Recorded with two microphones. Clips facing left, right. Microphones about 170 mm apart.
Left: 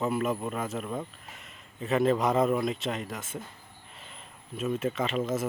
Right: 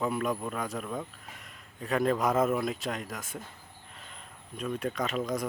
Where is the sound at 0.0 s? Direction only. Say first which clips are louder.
Left 2 dB; 5° left (ahead or behind).